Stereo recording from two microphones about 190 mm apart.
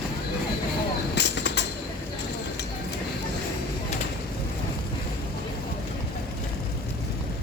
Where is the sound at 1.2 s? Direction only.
65° left (ahead or behind).